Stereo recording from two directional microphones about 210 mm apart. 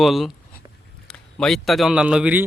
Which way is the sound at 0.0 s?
Centre (ahead or behind).